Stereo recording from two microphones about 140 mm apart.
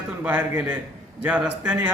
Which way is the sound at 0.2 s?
10° right (ahead or behind).